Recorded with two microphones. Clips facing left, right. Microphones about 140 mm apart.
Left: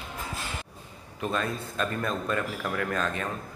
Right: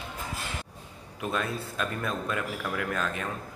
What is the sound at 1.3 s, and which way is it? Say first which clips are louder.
Speech: left 1 dB; 5° right (ahead or behind).